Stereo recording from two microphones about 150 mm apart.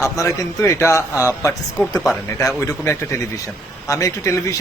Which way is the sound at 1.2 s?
15° right (ahead or behind).